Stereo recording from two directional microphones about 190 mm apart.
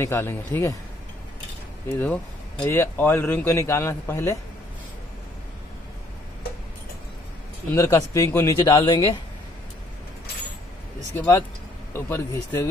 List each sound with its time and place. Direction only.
0.0 s a man's voice: 10° left (ahead or behind)
1.9 s a man's voice: 5° left (ahead or behind)
7.7 s a man's voice: 15° left (ahead or behind)
11.1 s a man's voice: 15° left (ahead or behind)